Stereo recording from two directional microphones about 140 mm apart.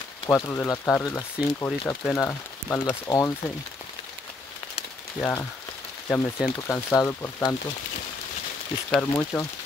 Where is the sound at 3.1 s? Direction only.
20° left (ahead or behind).